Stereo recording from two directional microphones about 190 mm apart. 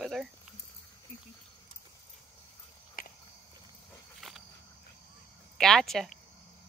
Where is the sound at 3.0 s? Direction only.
50° left (ahead or behind).